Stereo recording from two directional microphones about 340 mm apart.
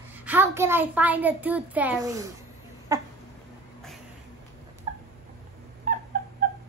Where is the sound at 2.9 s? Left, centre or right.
Centre.